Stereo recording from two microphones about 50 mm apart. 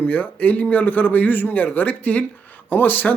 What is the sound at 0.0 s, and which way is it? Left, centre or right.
Speech, left.